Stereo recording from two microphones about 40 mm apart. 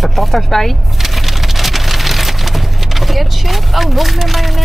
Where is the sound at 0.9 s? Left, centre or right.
Centre.